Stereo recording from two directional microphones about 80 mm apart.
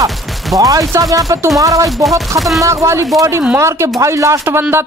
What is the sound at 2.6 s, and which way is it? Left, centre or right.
Speech, right.